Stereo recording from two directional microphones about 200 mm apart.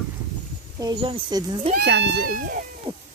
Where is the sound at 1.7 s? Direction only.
55° right (ahead or behind).